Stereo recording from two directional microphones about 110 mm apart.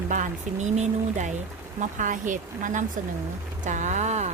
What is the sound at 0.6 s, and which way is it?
Speech, 90° right.